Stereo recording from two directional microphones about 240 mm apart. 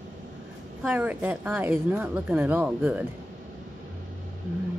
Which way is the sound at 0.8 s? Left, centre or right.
Centre.